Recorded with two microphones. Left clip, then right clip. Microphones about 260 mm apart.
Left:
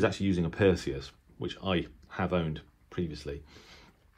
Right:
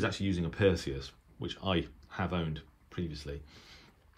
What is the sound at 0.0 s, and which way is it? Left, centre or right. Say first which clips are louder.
Speech: left 5 dB; centre.